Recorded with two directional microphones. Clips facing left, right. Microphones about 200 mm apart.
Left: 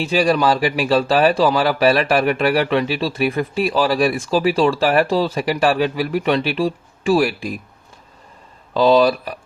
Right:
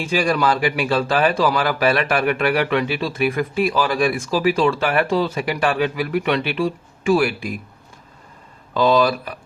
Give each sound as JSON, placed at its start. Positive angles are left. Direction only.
{"t": 0.3, "sound": "speech", "side_deg": 35}
{"t": 8.7, "sound": "speech", "side_deg": 30}